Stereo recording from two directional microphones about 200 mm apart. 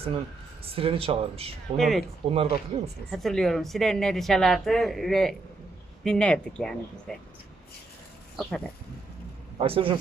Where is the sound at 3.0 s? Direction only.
Centre (ahead or behind).